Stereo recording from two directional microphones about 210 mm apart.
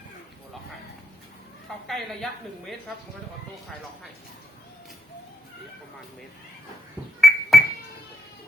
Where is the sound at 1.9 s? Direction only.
Centre (ahead or behind).